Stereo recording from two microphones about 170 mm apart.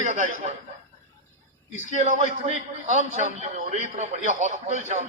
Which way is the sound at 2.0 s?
45° right (ahead or behind).